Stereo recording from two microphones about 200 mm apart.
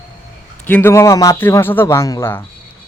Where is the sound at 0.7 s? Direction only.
10° left (ahead or behind).